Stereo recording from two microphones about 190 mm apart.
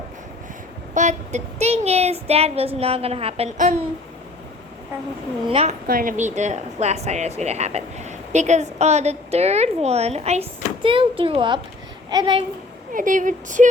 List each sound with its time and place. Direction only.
0.9 s speech: 40° right (ahead or behind)
5.5 s a child's voice: 30° right (ahead or behind)
5.9 s a child's voice: 45° right (ahead or behind); by 12.5 s 25° right (ahead or behind)
12.9 s speech: 45° right (ahead or behind)